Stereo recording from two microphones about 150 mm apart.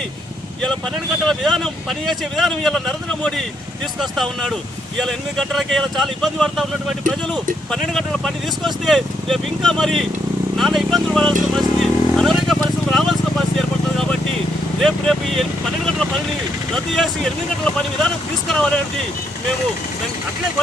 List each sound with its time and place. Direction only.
1.3 s speech: centre (ahead or behind)
11.5 s vehicle: centre (ahead or behind)
14.8 s speech: centre (ahead or behind)
16.7 s speech: 5° left (ahead or behind)